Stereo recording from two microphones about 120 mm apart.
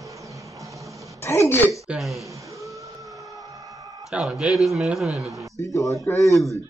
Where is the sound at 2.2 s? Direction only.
25° right (ahead or behind).